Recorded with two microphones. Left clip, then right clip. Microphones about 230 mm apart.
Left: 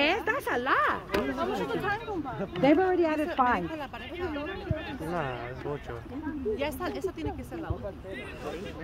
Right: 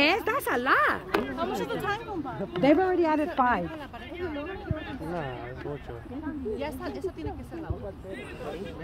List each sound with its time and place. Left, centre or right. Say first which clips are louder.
0.0 s chop: right 2 dB; right
2.5 s speech: right 1 dB; right
4.2 s speech: even; left
6.6 s speech: left 2 dB; left